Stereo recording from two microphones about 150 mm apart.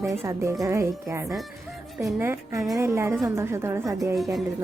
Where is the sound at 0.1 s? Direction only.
20° right (ahead or behind).